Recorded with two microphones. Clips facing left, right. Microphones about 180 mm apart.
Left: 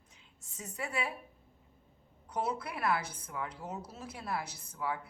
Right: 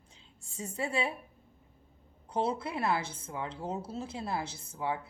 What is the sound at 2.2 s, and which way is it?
Speech, 30° right (ahead or behind).